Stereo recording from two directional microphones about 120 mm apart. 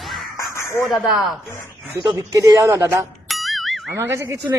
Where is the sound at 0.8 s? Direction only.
Centre (ahead or behind).